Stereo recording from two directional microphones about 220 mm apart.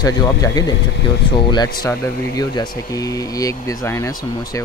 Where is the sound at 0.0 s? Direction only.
15° left (ahead or behind).